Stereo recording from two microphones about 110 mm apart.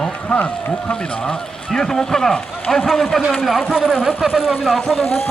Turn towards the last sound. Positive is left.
turn(degrees=0)  # may be behind; listen again after turning